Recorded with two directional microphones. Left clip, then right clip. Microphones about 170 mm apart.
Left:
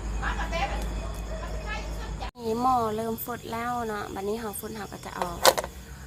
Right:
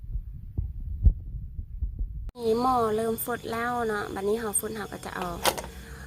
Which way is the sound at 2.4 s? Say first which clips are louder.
Right 1 dB; 20° right (ahead or behind).